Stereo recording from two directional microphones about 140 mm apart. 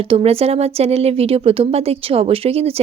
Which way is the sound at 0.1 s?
45° right (ahead or behind).